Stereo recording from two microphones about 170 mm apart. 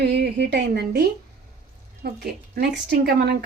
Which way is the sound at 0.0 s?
90° right.